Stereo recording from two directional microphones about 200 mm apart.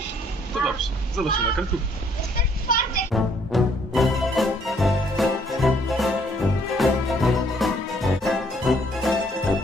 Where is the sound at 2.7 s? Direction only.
45° left (ahead or behind).